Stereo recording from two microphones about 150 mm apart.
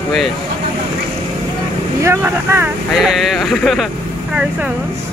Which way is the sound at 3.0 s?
Centre (ahead or behind).